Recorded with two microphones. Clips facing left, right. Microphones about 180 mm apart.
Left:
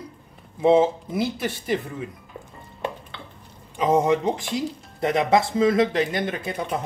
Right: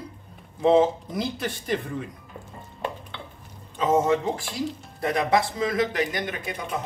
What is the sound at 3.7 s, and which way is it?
Speech, 15° left (ahead or behind).